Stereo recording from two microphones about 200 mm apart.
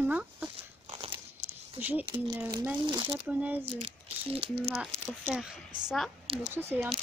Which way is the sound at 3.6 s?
30° right (ahead or behind).